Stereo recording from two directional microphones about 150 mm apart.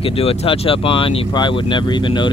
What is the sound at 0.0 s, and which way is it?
Speech, 40° left (ahead or behind).